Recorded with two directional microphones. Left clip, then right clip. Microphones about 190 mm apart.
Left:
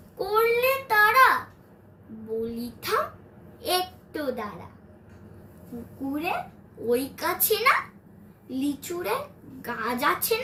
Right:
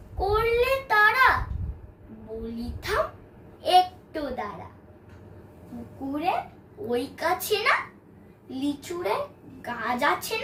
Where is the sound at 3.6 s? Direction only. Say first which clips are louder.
Right 7 dB; 15° right (ahead or behind).